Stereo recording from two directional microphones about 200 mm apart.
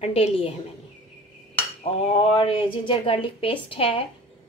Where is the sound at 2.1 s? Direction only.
25° left (ahead or behind).